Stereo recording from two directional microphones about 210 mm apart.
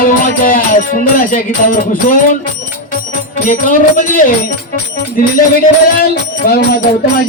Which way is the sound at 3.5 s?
40° left (ahead or behind).